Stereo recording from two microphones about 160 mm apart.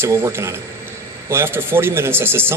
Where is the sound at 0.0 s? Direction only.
15° right (ahead or behind).